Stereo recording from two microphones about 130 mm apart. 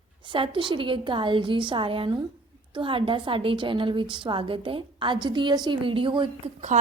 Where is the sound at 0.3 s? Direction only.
40° right (ahead or behind).